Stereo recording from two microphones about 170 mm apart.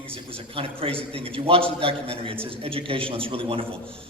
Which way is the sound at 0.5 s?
35° right (ahead or behind).